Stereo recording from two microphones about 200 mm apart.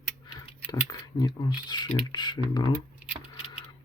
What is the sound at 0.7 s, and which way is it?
Speech, 20° left (ahead or behind).